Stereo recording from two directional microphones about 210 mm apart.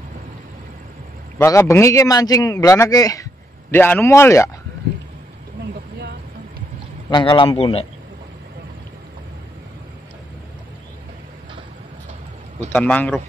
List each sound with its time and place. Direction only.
1.4 s speech: 15° left (ahead or behind)
7.1 s speech: 20° left (ahead or behind)
12.7 s speech: 5° left (ahead or behind)